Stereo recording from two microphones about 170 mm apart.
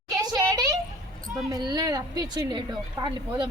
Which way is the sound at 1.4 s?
25° right (ahead or behind).